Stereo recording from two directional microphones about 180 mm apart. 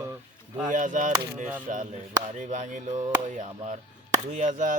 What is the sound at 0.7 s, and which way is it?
Music, 45° right (ahead or behind).